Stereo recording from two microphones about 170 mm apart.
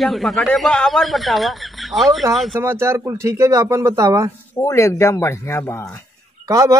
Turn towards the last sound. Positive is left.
turn(degrees=-20)  # may be behind; listen again after turning